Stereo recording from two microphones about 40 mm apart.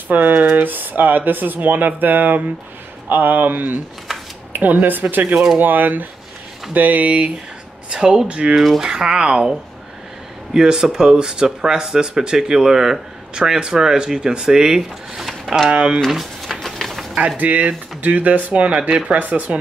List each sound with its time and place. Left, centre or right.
0.1 s speech: right
7.9 s speech: centre
8.8 s speech: centre
10.5 s speech: centre
15.7 s speech: right
16.1 s a sound: centre
17.4 s speech: right
19.1 s speech: right